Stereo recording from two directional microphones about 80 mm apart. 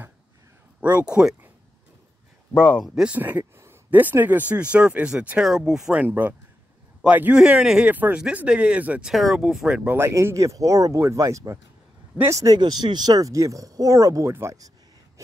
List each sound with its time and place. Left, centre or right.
0.7 s speech: centre
2.5 s speech: centre
2.9 s speech: centre
5.9 s speech: right
7.9 s speech: right
9.1 s speech: centre
9.9 s speech: right
12.5 s speech: right
15.2 s a sound: right